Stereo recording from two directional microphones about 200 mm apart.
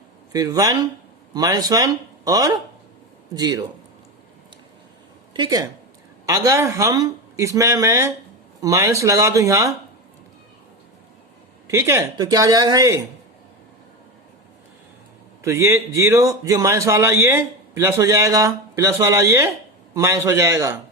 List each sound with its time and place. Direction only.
0.3 s speech: 20° right (ahead or behind)
5.3 s a woman's voice: 20° right (ahead or behind)
11.7 s a man's voice: 15° right (ahead or behind)
15.4 s a man's voice: 15° right (ahead or behind)